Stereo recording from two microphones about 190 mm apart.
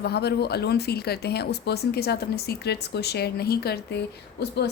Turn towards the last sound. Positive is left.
turn(degrees=60)  # may be behind; listen again after turning